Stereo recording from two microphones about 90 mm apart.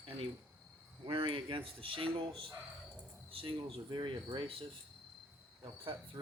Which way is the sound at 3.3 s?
90° right.